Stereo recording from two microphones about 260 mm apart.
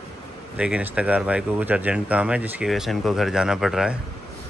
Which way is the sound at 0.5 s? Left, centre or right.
Centre.